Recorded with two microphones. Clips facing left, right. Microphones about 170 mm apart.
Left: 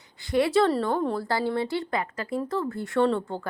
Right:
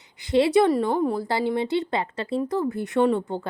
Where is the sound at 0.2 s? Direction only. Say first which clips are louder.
Right 3 dB; 20° right (ahead or behind).